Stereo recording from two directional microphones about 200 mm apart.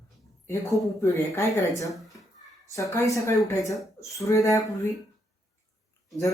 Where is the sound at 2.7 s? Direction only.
15° left (ahead or behind).